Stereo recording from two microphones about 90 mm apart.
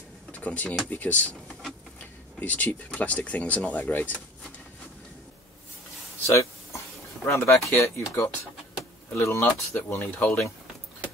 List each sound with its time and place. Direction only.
0.3 s speech: 15° left (ahead or behind)
2.4 s speech: 20° left (ahead or behind)
6.2 s a sound: 30° left (ahead or behind)
7.2 s speech: 25° left (ahead or behind)
7.5 s speech: 35° left (ahead or behind)